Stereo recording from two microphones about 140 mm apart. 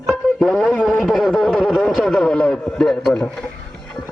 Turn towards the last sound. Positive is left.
turn(degrees=5)  # may be behind; listen again after turning